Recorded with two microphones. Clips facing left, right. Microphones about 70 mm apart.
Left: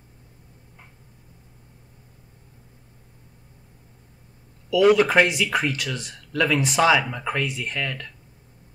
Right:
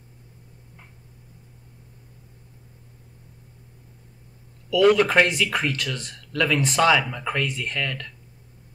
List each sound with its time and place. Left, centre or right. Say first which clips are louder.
4.6 s speech: left 1 dB; centre